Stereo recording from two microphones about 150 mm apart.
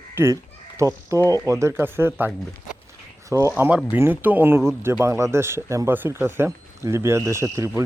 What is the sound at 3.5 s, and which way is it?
Speech, 5° right (ahead or behind).